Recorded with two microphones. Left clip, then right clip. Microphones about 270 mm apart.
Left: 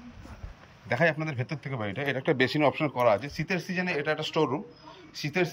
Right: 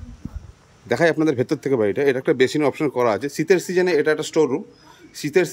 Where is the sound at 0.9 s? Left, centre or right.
Right.